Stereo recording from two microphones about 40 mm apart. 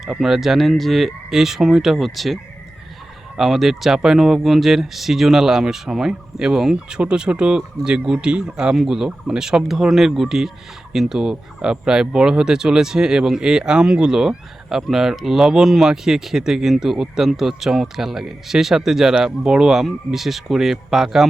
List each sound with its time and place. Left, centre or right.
0.2 s speech: centre